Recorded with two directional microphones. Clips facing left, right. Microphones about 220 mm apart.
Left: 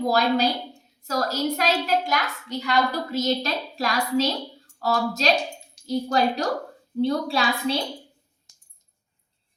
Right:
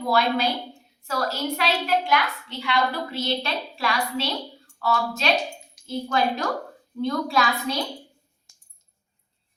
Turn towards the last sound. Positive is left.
turn(degrees=30)  # may be behind; listen again after turning